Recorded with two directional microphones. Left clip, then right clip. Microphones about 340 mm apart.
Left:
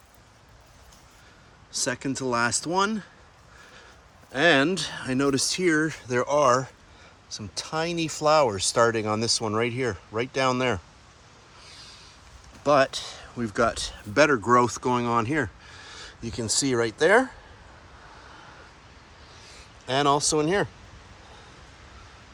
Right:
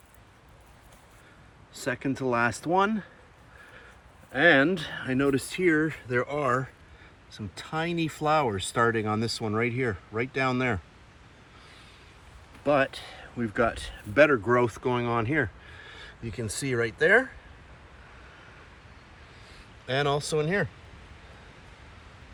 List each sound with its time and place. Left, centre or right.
1.7 s speech: centre
4.3 s speech: centre
7.3 s speech: left
7.7 s speech: centre
12.6 s speech: centre
19.9 s speech: centre